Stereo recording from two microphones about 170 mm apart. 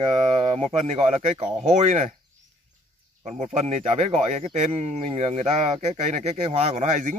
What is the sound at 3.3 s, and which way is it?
Speech, 40° right (ahead or behind).